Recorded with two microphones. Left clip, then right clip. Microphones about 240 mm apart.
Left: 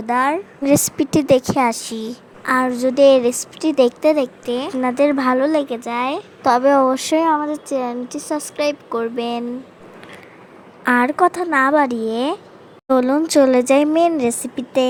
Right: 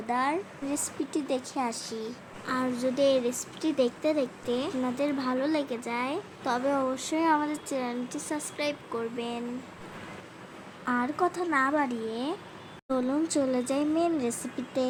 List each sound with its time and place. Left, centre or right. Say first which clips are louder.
0.1 s a woman's voice: left 11 dB; left
7.3 s speech: left 4 dB; centre
7.7 s a woman's voice: left 10 dB; left
10.8 s speech: left 13 dB; left